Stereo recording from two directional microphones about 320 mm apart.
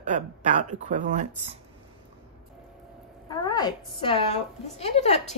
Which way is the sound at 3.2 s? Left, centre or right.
Centre.